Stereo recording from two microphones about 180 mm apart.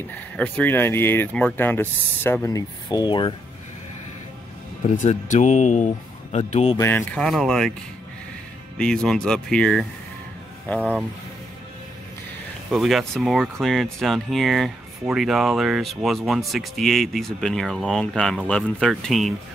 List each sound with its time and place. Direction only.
0.1 s speech: 10° left (ahead or behind); by 3.3 s 25° left (ahead or behind)
4.9 s speech: 45° left (ahead or behind)
6.8 s speech: 10° left (ahead or behind)
8.7 s speech: 5° left (ahead or behind)
10.8 s speech: 10° right (ahead or behind)
12.7 s speech: centre (ahead or behind)